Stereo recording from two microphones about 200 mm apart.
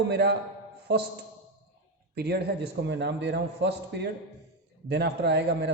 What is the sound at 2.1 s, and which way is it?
A man's voice, 55° right (ahead or behind).